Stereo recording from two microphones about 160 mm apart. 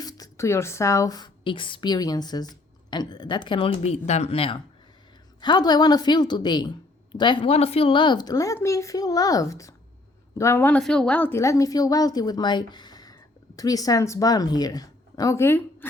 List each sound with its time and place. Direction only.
0.0 s a woman's voice: 25° left (ahead or behind)